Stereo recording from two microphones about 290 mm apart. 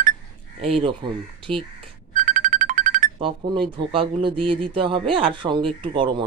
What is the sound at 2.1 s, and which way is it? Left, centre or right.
Music, right.